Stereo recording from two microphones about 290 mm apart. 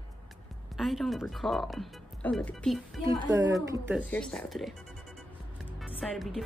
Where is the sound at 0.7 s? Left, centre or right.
Centre.